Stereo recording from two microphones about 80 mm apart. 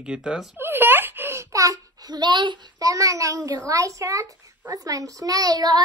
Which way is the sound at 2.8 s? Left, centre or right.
Right.